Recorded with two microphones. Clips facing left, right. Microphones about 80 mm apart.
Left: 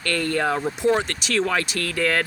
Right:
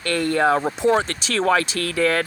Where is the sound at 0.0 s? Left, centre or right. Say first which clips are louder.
Right 4 dB; right.